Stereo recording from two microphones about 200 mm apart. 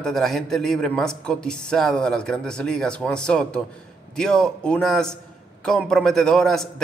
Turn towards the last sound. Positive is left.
turn(degrees=0)  # may be behind; listen again after turning